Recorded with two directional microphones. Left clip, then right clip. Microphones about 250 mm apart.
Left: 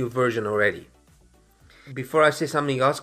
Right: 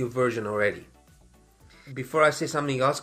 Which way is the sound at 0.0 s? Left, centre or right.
Left.